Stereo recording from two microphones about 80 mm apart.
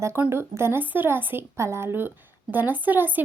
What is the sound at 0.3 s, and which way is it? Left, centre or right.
Speech, right.